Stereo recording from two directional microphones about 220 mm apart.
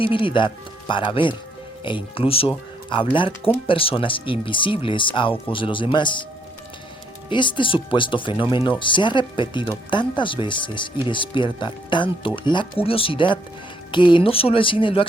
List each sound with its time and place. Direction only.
0.0 s speech: 25° left (ahead or behind)
7.3 s speech: 20° left (ahead or behind)